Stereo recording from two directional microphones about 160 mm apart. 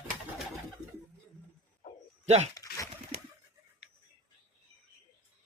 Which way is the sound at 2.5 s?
20° left (ahead or behind).